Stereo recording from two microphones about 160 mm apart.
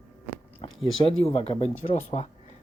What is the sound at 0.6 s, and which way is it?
Speech, 40° left (ahead or behind).